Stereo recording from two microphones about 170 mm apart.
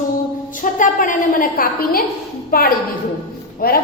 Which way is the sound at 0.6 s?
50° left (ahead or behind).